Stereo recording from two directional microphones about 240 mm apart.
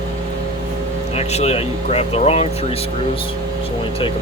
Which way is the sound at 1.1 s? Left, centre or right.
Left.